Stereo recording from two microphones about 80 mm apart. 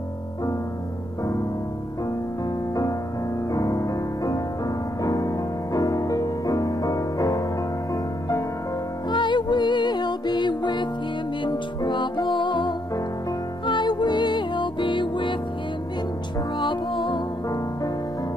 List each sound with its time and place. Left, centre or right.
3.5 s music: left
9.1 s music: left